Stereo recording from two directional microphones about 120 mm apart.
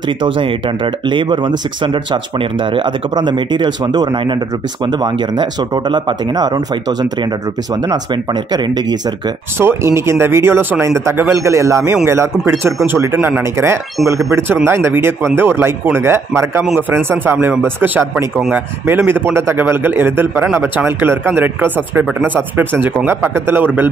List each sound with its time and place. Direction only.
0.2 s speech: 45° right (ahead or behind)
8.5 s speech: 35° right (ahead or behind)
9.6 s a man's voice: 20° right (ahead or behind)